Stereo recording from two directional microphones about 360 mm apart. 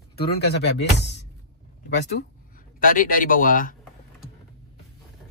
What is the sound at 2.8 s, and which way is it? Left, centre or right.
Speech, left.